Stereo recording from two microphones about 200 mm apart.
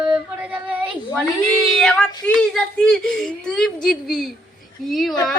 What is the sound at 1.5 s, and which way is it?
Speech, centre (ahead or behind).